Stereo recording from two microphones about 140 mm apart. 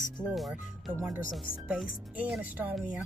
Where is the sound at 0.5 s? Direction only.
15° right (ahead or behind).